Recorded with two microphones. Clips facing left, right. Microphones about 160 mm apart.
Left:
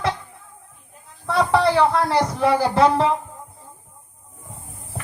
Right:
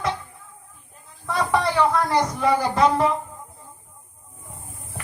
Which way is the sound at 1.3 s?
30° left (ahead or behind).